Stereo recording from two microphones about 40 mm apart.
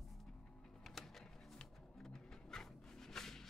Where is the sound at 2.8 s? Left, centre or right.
Centre.